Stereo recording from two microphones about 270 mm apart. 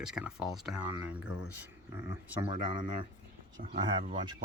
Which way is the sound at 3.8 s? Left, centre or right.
Centre.